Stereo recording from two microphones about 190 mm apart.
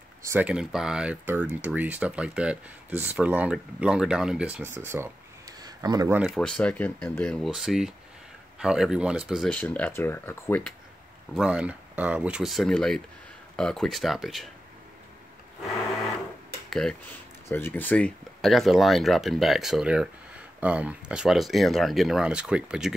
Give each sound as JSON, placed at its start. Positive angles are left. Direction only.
{"t": 0.2, "sound": "speech", "side_deg": -10}
{"t": 5.6, "sound": "a sound", "side_deg": -20}
{"t": 6.1, "sound": "speech", "side_deg": 0}
{"t": 11.3, "sound": "speech", "side_deg": -5}
{"t": 17.5, "sound": "speech", "side_deg": 10}